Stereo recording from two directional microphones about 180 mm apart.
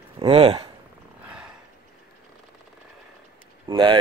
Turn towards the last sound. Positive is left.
turn(degrees=-25)  # may be behind; listen again after turning